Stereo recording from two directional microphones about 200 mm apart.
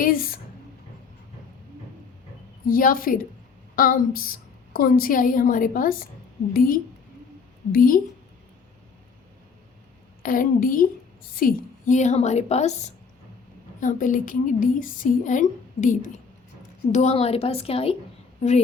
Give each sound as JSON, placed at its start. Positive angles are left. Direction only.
{"t": 0.0, "sound": "speech", "side_deg": 45}
{"t": 2.6, "sound": "a woman's voice", "side_deg": 45}
{"t": 10.2, "sound": "a woman's voice", "side_deg": 45}